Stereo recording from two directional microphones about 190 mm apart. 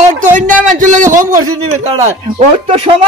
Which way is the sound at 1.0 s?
15° right (ahead or behind).